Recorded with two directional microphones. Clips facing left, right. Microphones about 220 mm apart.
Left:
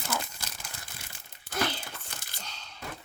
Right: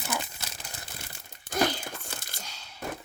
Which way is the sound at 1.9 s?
50° right (ahead or behind).